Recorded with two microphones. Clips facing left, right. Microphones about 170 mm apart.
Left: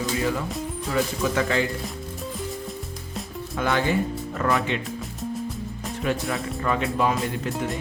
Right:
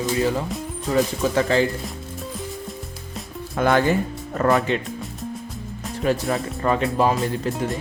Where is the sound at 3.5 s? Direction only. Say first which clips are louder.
Right 5 dB; 50° right (ahead or behind).